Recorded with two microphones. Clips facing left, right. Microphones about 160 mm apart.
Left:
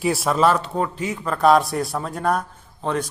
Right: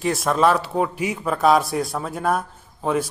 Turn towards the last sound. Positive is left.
turn(degrees=-5)  # may be behind; listen again after turning